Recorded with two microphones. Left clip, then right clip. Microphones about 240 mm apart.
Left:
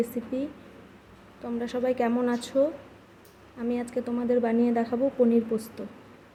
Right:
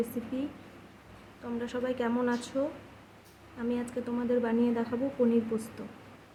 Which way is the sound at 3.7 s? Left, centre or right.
Centre.